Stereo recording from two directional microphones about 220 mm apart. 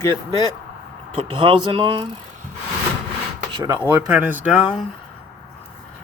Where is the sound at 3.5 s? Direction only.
15° right (ahead or behind).